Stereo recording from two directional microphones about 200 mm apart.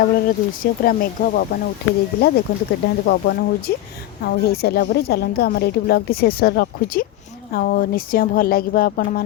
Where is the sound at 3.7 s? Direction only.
50° left (ahead or behind).